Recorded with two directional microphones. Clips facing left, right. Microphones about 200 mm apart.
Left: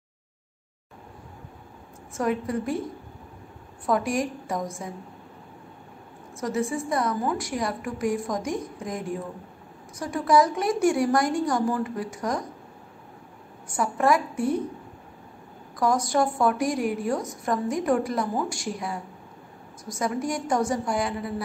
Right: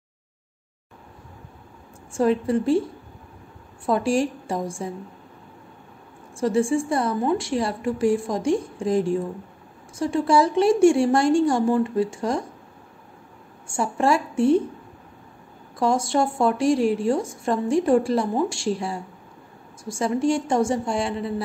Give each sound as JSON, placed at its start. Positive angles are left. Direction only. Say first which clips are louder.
{"t": 2.1, "sound": "a woman's voice", "louder": "right 6 dB", "side_deg": -30}
{"t": 3.8, "sound": "a woman's voice", "louder": "right 4 dB", "side_deg": -30}
{"t": 6.4, "sound": "a woman's voice", "louder": "right 6 dB", "side_deg": -30}
{"t": 13.7, "sound": "a woman's voice", "louder": "right 1 dB", "side_deg": -30}
{"t": 15.8, "sound": "a woman's voice", "louder": "right 2 dB", "side_deg": -25}